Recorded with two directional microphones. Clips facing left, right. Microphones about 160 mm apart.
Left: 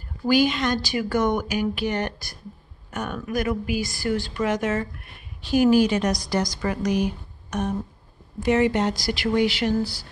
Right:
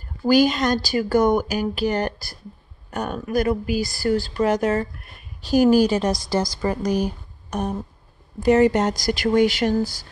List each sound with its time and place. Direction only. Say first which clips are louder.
0.3 s speech: right 3 dB; 40° right (ahead or behind)